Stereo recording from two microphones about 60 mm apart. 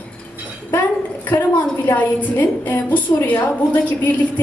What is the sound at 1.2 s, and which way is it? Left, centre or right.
A woman's voice, left.